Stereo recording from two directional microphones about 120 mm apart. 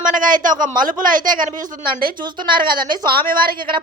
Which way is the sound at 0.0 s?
90° right.